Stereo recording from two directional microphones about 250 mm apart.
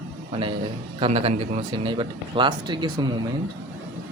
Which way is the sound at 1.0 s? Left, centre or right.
Right.